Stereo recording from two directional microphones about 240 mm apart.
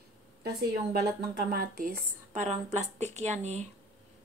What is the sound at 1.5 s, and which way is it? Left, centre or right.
Speech, right.